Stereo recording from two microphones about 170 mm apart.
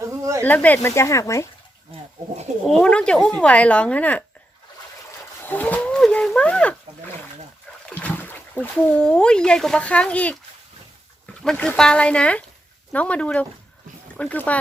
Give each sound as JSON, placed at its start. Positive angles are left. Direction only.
{"t": 0.0, "sound": "a sound", "side_deg": -15}
{"t": 0.4, "sound": "speech", "side_deg": 10}
{"t": 2.6, "sound": "speech", "side_deg": 5}
{"t": 5.4, "sound": "wild animals", "side_deg": 10}
{"t": 7.9, "sound": "speech", "side_deg": 10}
{"t": 11.4, "sound": "speech", "side_deg": 5}